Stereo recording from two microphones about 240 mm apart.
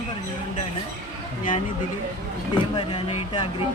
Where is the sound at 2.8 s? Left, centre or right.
Centre.